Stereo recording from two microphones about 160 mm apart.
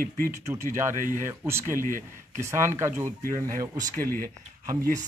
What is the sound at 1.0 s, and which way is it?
Speech, 55° right (ahead or behind).